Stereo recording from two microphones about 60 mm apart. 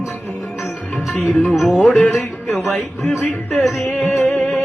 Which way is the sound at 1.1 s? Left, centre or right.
Left.